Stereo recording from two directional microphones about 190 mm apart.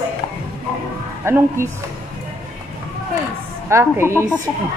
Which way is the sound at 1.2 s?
15° right (ahead or behind).